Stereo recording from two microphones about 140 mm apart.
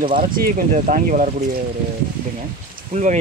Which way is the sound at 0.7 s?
65° right (ahead or behind).